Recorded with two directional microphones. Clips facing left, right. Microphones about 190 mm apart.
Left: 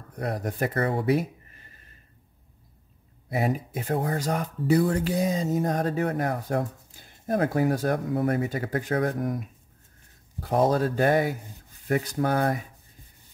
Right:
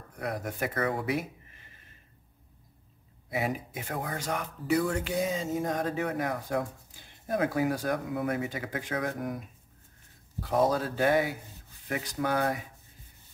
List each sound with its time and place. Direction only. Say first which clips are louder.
0.2 s speech: left 4 dB; 35° left (ahead or behind)
3.3 s speech: left 5 dB; 40° left (ahead or behind)
8.9 s speech: left 6 dB; 30° left (ahead or behind)
10.4 s speech: left 4 dB; 45° left (ahead or behind)